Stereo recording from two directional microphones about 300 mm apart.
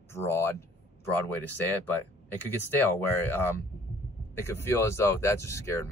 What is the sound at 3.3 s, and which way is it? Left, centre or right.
Speech, centre.